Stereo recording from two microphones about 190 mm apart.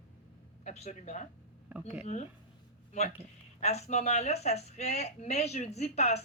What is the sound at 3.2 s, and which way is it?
Speech, 35° left (ahead or behind).